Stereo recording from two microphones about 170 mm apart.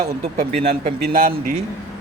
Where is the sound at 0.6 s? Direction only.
60° right (ahead or behind).